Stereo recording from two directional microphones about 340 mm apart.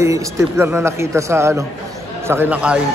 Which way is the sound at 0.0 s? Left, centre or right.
Centre.